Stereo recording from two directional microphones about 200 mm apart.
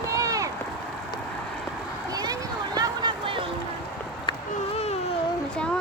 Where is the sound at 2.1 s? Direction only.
20° right (ahead or behind).